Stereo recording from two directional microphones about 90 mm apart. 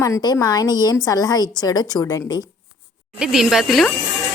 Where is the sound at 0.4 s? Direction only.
45° left (ahead or behind).